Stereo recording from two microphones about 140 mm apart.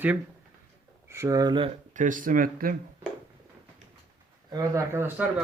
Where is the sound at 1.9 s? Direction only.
65° right (ahead or behind); by 2.7 s 90° right.